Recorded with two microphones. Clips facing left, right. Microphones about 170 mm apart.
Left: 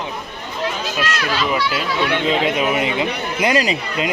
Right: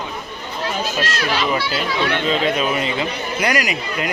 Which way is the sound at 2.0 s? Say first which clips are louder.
Left 1 dB; 15° left (ahead or behind).